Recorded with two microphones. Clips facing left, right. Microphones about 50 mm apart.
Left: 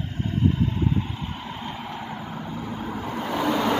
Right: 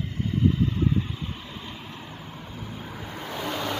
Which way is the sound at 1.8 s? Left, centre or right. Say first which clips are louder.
Left 7 dB; left.